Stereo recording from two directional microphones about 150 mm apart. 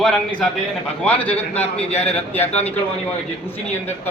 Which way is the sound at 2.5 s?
45° left (ahead or behind).